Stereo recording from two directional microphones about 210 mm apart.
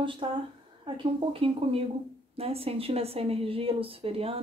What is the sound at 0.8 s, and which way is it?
Speech, 25° right (ahead or behind).